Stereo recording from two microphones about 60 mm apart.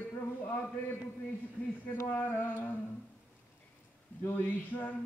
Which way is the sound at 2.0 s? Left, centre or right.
Left.